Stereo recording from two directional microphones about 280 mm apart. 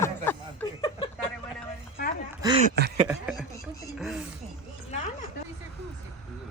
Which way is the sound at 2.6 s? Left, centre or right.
Right.